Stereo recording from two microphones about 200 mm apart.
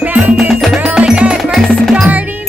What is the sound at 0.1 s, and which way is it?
Music, 5° right (ahead or behind).